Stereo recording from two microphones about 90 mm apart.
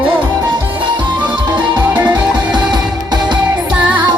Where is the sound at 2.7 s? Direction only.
50° right (ahead or behind).